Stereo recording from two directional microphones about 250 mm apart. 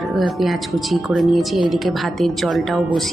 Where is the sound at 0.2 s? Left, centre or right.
Centre.